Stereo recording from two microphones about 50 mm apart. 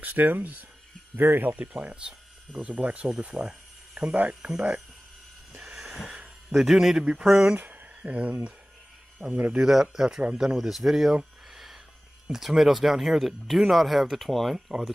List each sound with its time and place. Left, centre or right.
0.0 s speech: right
2.0 s speech: centre
5.5 s a sound: centre
6.5 s speech: centre
7.0 s speech: centre
7.5 s speech: right
9.6 s speech: centre
11.5 s a sound: centre
12.3 s speech: centre